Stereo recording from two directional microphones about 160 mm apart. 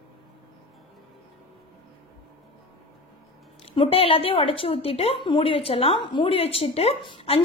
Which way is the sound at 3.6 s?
35° left (ahead or behind).